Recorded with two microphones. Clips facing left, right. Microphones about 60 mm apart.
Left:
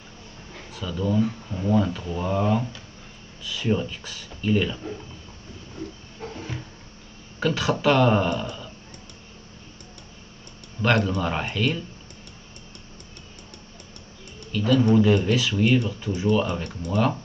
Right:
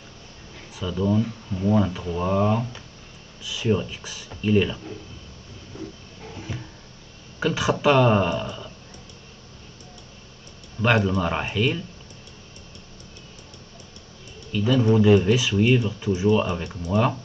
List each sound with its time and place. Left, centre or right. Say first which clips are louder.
0.7 s speech: right 1 dB; centre
7.3 s speech: right 1 dB; centre
10.8 s speech: right 1 dB; centre
14.5 s speech: left 1 dB; centre